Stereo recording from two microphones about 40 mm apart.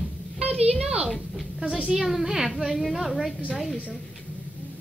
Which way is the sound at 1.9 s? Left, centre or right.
Centre.